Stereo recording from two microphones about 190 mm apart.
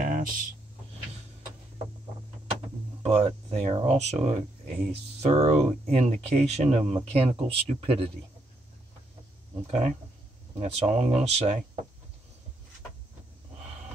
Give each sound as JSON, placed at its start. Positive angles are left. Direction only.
{"t": 0.0, "sound": "a sound", "side_deg": -45}
{"t": 3.0, "sound": "speech", "side_deg": -35}
{"t": 9.7, "sound": "speech", "side_deg": -35}